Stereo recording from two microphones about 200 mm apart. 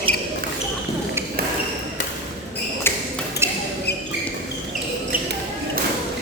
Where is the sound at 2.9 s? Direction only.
10° left (ahead or behind).